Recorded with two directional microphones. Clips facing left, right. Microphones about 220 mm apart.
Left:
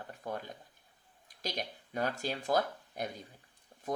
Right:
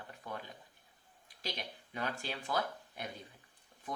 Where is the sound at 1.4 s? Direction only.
40° left (ahead or behind).